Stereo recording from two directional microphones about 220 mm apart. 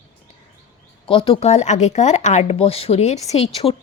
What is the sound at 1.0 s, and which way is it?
Speech, 25° left (ahead or behind).